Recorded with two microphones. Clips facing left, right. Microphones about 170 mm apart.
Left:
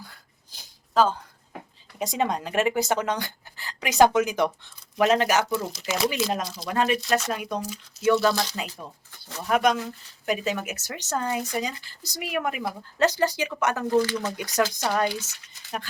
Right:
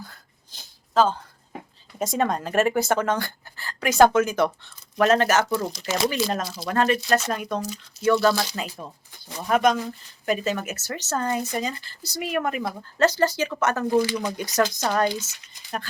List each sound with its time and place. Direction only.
0.5 s a sound: 10° left (ahead or behind)
2.4 s speech: 45° right (ahead or behind)
2.7 s speech: 15° left (ahead or behind)
5.5 s speech: 5° left (ahead or behind)
6.7 s speech: 10° left (ahead or behind)
7.0 s speech: centre (ahead or behind)
9.5 s speech: 5° left (ahead or behind)
13.8 s speech: 10° right (ahead or behind)
14.7 s speech: 15° left (ahead or behind)
15.6 s a sound: 15° right (ahead or behind)